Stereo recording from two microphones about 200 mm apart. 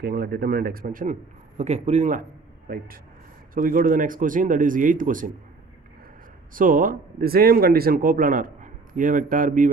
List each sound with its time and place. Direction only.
0.0 s a man's voice: 50° right (ahead or behind)
6.5 s speech: 45° right (ahead or behind)